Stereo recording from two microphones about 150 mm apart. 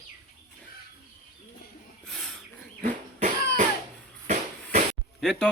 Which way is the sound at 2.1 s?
5° left (ahead or behind).